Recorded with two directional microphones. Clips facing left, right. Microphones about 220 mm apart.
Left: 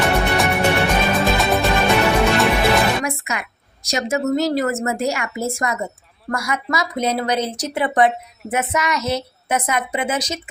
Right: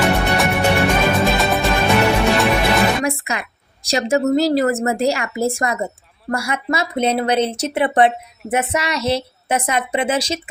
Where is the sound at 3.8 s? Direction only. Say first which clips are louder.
Right 3 dB; 30° right (ahead or behind).